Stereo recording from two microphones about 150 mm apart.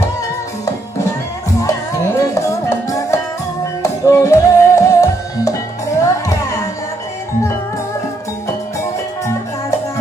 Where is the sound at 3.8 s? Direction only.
20° left (ahead or behind).